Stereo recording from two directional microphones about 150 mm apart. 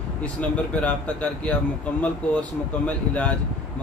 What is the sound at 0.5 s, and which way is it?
Speech, 10° left (ahead or behind).